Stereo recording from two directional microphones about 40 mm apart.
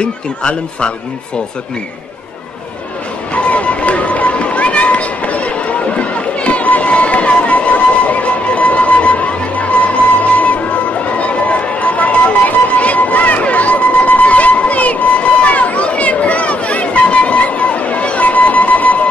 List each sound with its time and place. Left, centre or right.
0.0 s a man's voice: left
3.3 s run: left